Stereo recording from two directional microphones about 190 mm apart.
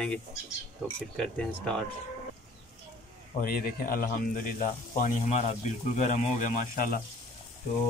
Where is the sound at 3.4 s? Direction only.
50° left (ahead or behind).